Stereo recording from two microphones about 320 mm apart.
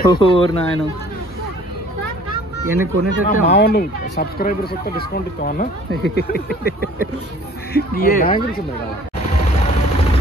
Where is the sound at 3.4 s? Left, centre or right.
Left.